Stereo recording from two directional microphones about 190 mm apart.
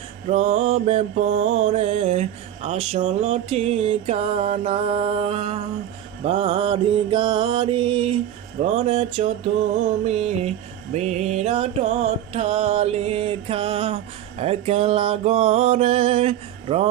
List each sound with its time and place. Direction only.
0.3 s mantra: 35° right (ahead or behind)